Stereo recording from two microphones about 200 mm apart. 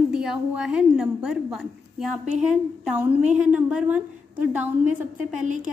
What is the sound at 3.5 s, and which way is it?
Speech, 5° right (ahead or behind).